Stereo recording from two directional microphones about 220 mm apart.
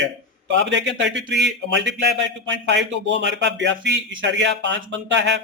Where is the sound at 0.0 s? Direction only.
55° right (ahead or behind).